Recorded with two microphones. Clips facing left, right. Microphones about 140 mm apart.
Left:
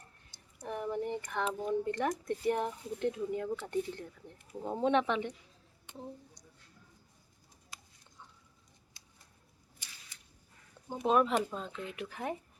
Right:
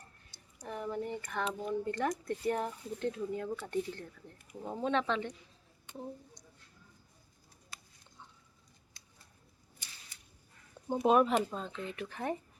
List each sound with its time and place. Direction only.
0.7 s speech: 15° left (ahead or behind)
11.0 s speech: 5° right (ahead or behind)